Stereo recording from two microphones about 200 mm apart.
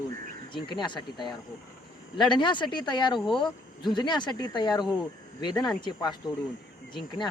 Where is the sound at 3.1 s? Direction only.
Centre (ahead or behind).